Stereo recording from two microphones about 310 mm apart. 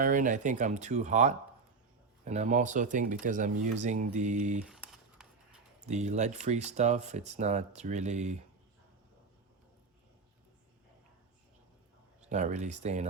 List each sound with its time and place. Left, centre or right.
0.0 s speech: right
4.6 s a sound: centre
5.8 s speech: right
12.2 s speech: right